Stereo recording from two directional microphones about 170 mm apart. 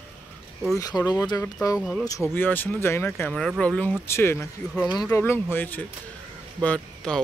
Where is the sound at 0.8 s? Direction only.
25° left (ahead or behind).